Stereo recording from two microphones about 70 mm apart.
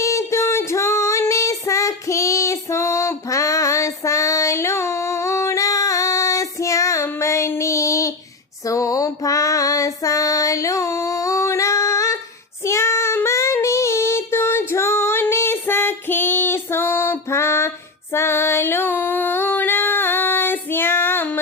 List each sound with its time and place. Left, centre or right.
0.0 s female singing: left
7.2 s child singing: left
8.6 s female singing: left
12.6 s child singing: left
14.7 s female singing: left
18.1 s music: left